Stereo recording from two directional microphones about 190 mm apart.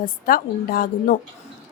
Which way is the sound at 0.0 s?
50° left (ahead or behind).